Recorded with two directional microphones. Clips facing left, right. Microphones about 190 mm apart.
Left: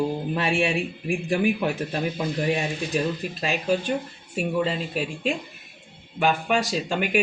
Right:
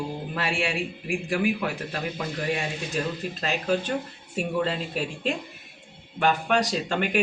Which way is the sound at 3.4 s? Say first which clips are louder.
Left 2 dB; 10° left (ahead or behind).